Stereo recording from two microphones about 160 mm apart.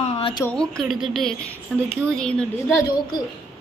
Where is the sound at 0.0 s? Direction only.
35° left (ahead or behind).